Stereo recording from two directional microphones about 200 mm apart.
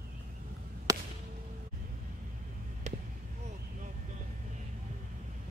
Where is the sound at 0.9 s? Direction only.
15° right (ahead or behind).